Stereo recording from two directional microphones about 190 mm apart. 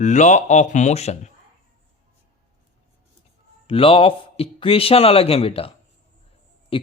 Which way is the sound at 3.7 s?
30° left (ahead or behind).